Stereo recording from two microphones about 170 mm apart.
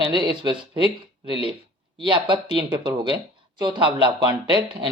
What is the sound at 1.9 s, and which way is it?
Speech, 30° right (ahead or behind).